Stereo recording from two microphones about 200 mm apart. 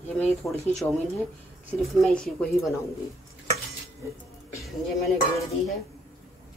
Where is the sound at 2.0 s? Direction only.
5° left (ahead or behind).